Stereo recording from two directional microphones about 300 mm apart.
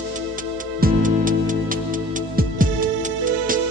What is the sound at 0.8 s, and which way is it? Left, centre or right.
Music, right.